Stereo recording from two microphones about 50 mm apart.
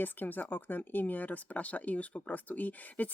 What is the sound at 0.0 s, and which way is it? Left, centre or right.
Speech, left.